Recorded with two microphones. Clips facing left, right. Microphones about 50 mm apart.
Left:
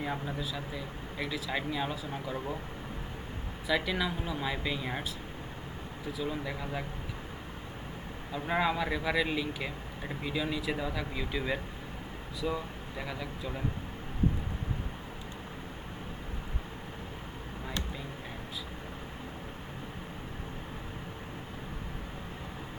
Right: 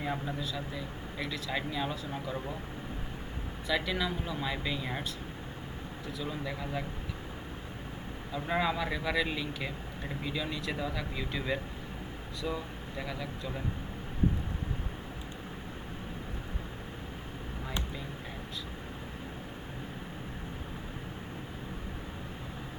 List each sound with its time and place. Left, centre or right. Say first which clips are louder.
0.0 s speech: even; centre
3.7 s speech: left 1 dB; centre
6.1 s speech: left 2 dB; centre
8.3 s speech: left 1 dB; centre